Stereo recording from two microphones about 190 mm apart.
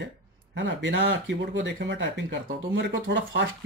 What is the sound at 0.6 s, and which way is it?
Speech, 70° right (ahead or behind).